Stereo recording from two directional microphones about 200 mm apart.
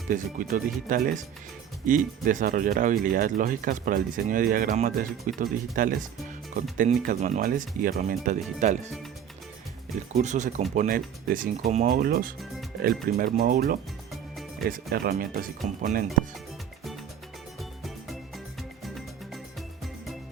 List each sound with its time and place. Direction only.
0.1 s speech: 40° right (ahead or behind)
10.1 s speech: 35° right (ahead or behind)
17.6 s music: centre (ahead or behind)